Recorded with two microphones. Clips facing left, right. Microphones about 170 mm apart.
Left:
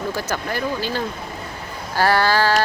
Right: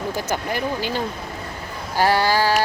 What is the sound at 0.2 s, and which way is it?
Speech, 15° right (ahead or behind).